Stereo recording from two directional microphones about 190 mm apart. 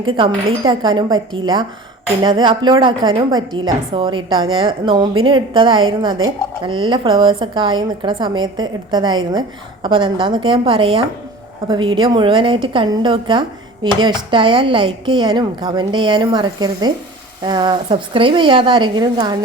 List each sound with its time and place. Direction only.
0.0 s speech: 30° right (ahead or behind)